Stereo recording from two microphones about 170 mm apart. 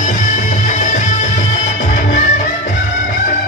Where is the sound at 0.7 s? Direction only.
45° left (ahead or behind).